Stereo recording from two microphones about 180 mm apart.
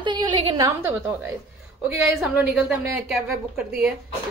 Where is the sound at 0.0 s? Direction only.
25° right (ahead or behind).